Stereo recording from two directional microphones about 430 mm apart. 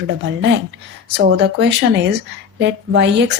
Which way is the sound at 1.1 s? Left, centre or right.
Right.